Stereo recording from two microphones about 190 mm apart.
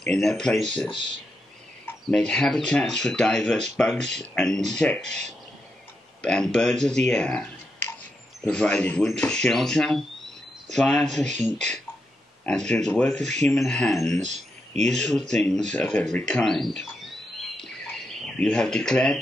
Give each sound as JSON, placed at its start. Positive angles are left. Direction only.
{"t": 0.0, "sound": "speech", "side_deg": 5}
{"t": 0.7, "sound": "speech", "side_deg": 25}
{"t": 1.9, "sound": "speech", "side_deg": 5}
{"t": 6.2, "sound": "speech", "side_deg": 5}
{"t": 7.1, "sound": "clicking", "side_deg": 5}
{"t": 8.5, "sound": "speech", "side_deg": 5}
{"t": 14.2, "sound": "a sound", "side_deg": -40}
{"t": 15.0, "sound": "speech", "side_deg": 5}
{"t": 17.6, "sound": "bird", "side_deg": 5}